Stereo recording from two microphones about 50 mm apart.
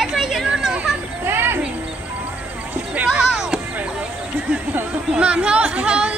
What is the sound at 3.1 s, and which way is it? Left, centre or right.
Music, centre.